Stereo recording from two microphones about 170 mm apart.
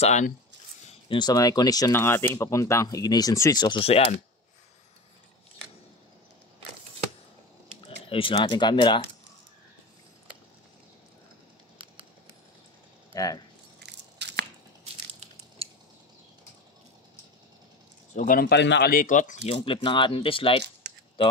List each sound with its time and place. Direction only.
0.0 s speech: 45° left (ahead or behind)
1.0 s speech: 25° left (ahead or behind)
7.8 s speech: 30° left (ahead or behind)
13.1 s speech: 20° left (ahead or behind)
13.8 s biting: 90° right
15.6 s a sound: 35° right (ahead or behind)
18.1 s speech: 55° left (ahead or behind)
19.4 s speech: 30° left (ahead or behind)